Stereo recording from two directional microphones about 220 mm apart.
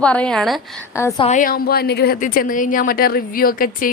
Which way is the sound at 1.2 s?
35° left (ahead or behind).